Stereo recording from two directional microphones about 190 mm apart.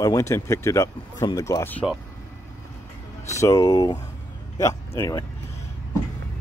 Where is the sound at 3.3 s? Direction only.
15° left (ahead or behind).